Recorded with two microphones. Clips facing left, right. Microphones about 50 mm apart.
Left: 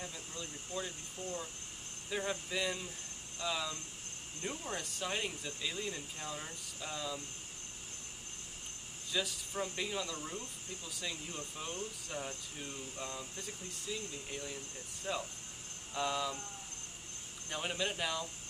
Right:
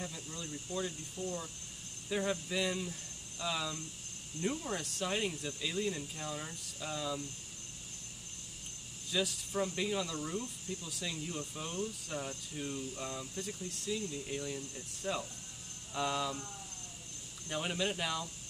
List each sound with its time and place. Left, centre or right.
0.0 s a sound: centre
0.7 s speech: left
2.0 s speech: centre
9.1 s speech: centre
17.5 s speech: centre